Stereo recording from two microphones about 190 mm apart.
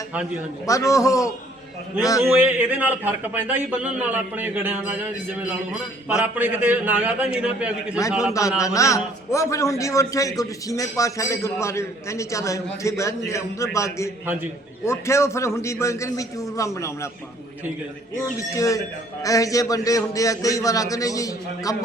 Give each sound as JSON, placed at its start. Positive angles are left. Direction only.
{"t": 0.7, "sound": "a man's voice", "side_deg": 15}
{"t": 2.2, "sound": "a man's voice", "side_deg": -5}
{"t": 8.3, "sound": "a man's voice", "side_deg": 15}
{"t": 18.3, "sound": "a man's voice", "side_deg": 15}